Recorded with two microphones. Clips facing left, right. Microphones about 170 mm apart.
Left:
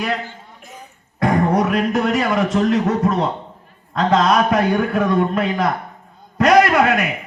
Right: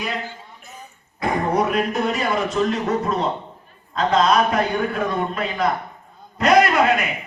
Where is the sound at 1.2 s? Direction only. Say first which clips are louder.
Left 4 dB; 85° left.